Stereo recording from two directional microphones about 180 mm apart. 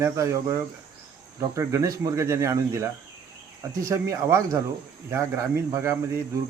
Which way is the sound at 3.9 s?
15° right (ahead or behind).